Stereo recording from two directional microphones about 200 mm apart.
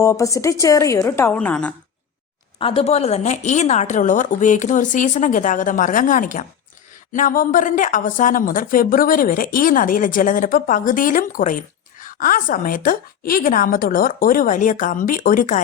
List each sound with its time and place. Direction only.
0.0 s a woman's voice: 15° left (ahead or behind)
2.6 s a woman's voice: 30° left (ahead or behind)